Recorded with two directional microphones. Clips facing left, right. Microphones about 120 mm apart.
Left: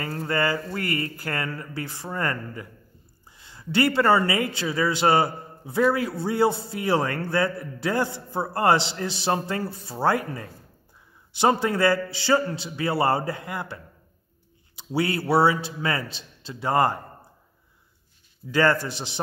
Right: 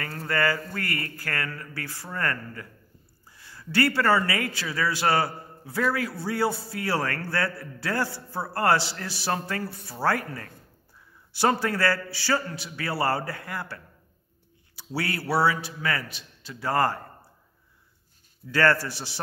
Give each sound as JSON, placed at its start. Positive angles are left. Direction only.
{"t": 0.2, "sound": "a man's voice", "side_deg": 20}
{"t": 14.8, "sound": "a man's voice", "side_deg": 20}
{"t": 18.5, "sound": "a man's voice", "side_deg": 20}